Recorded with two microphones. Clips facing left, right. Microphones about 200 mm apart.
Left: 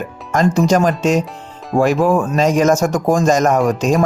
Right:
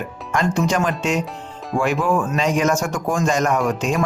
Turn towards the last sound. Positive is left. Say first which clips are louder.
# left 5 dB
turn(degrees=40)  # may be behind; listen again after turning